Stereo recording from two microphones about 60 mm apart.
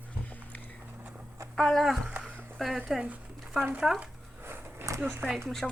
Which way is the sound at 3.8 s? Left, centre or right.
Centre.